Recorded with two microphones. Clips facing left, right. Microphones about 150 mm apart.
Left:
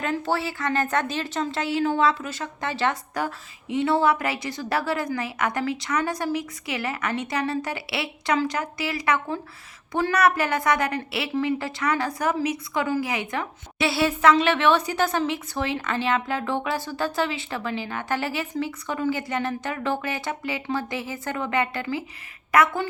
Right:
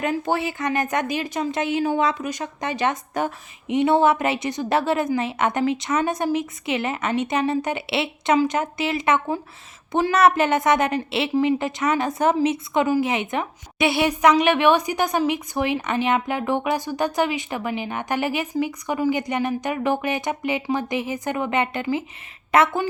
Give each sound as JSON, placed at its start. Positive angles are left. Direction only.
{"t": 0.0, "sound": "a woman's voice", "side_deg": -15}